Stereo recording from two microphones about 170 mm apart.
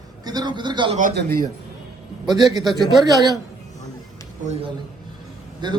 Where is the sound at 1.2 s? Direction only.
60° right (ahead or behind).